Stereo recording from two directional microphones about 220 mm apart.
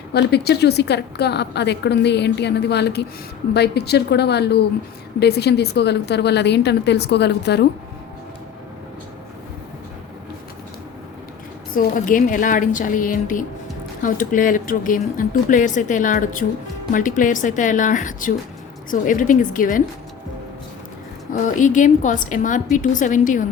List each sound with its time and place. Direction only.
0.1 s a woman's voice: 50° left (ahead or behind)
11.7 s speech: 40° left (ahead or behind)
21.4 s speech: 35° left (ahead or behind)